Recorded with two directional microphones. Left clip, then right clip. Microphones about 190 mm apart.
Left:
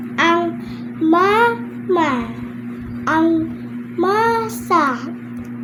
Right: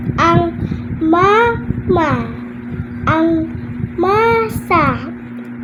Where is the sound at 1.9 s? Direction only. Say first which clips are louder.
Right 2 dB; 30° left (ahead or behind).